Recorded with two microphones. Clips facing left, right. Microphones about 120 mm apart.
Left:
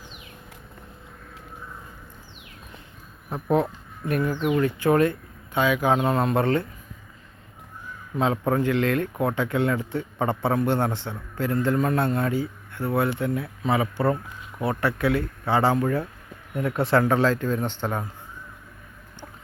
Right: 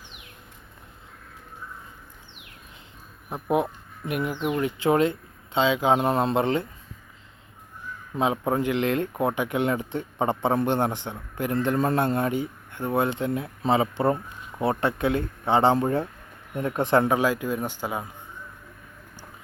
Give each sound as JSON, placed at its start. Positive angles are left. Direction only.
{"t": 3.5, "sound": "speech", "side_deg": -15}
{"t": 8.1, "sound": "speech", "side_deg": -15}